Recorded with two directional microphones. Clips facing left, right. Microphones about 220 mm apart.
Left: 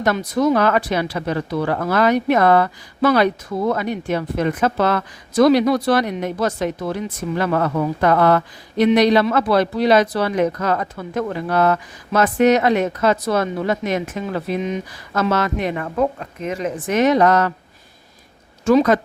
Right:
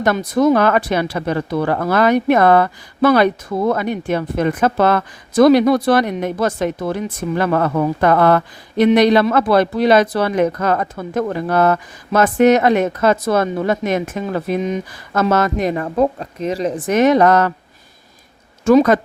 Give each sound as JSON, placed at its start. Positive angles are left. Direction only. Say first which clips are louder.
{"t": 0.0, "sound": "speech", "louder": "right 3 dB", "side_deg": -50}
{"t": 18.6, "sound": "speech", "louder": "right 3 dB", "side_deg": -50}